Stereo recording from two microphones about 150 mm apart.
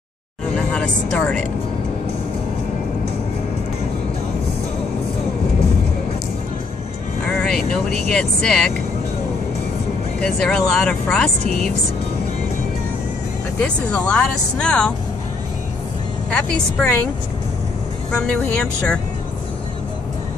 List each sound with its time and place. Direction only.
0.6 s speech: 10° left (ahead or behind)
7.2 s vehicle: 5° left (ahead or behind)
7.9 s speech: 5° left (ahead or behind)
10.2 s speech: 5° left (ahead or behind)
13.6 s speech: 5° left (ahead or behind)
16.3 s speech: 10° left (ahead or behind)
18.1 s speech: 5° left (ahead or behind)